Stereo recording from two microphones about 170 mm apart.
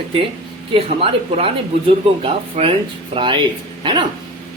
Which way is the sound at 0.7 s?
35° right (ahead or behind).